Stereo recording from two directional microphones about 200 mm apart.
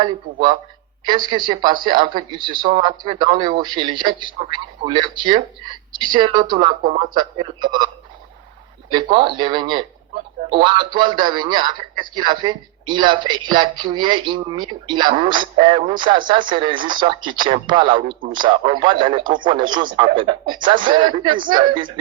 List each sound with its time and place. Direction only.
1.0 s a man's voice: 25° right (ahead or behind)
6.8 s speech: 35° right (ahead or behind)
7.1 s a man's voice: 25° right (ahead or behind)
8.9 s a man's voice: 25° right (ahead or behind)